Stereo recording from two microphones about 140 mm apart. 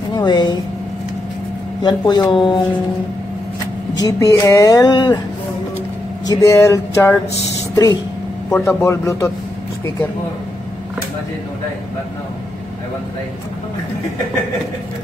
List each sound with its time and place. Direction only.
0.1 s speech: 30° left (ahead or behind)
1.8 s speech: 30° left (ahead or behind)
4.0 s speech: 25° left (ahead or behind)
6.2 s speech: 25° left (ahead or behind)